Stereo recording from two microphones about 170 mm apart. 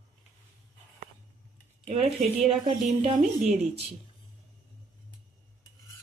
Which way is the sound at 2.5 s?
35° right (ahead or behind).